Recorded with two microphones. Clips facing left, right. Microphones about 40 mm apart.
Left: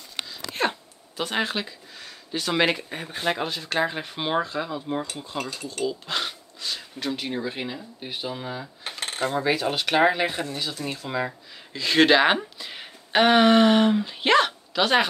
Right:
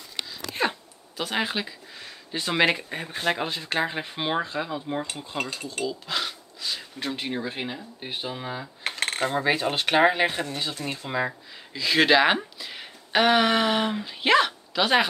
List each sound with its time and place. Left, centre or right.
0.6 s a sound: centre
3.1 s speech: centre
3.4 s speech: centre
5.4 s speech: right
5.9 s a sound: centre
7.1 s speech: centre
8.8 s cutlery: right
9.2 s speech: right
10.5 s speech: right
11.1 s speech: centre
11.7 s speech: centre